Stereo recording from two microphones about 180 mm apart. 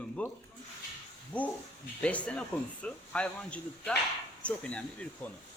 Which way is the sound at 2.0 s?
5° left (ahead or behind).